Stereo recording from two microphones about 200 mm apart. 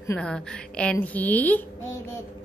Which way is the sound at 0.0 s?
10° left (ahead or behind).